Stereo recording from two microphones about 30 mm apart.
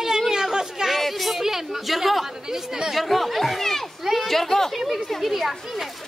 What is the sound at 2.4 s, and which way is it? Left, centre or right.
Speech, centre.